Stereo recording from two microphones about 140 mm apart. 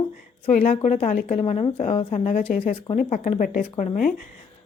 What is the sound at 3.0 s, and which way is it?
Speech, 60° left (ahead or behind).